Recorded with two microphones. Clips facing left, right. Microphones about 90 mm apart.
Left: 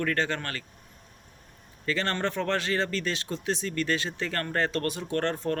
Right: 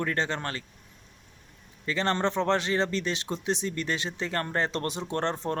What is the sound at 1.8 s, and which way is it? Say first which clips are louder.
Speech: right 2 dB; 20° right (ahead or behind).